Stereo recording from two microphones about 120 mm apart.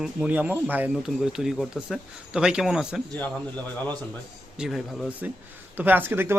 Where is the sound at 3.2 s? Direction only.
10° left (ahead or behind).